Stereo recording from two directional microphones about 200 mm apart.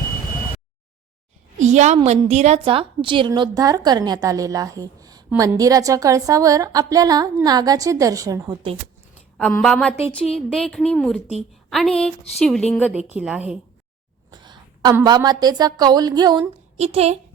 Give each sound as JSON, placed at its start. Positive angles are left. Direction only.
{"t": 1.5, "sound": "a sound", "side_deg": -35}
{"t": 2.0, "sound": "a woman's voice", "side_deg": -35}
{"t": 9.4, "sound": "speech", "side_deg": 5}
{"t": 12.9, "sound": "speech", "side_deg": -5}
{"t": 14.3, "sound": "a woman's voice", "side_deg": -20}
{"t": 16.7, "sound": "a woman's voice", "side_deg": -30}